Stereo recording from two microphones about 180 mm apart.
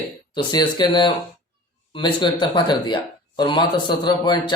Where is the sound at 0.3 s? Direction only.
25° left (ahead or behind).